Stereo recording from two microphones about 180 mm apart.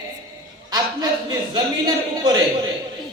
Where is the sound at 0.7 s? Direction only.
20° right (ahead or behind).